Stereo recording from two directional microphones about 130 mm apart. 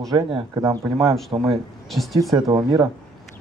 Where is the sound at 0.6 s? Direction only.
25° right (ahead or behind).